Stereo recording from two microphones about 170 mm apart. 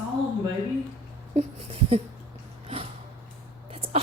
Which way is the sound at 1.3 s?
35° right (ahead or behind).